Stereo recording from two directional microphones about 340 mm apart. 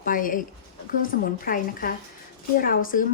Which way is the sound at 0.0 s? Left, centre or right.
Left.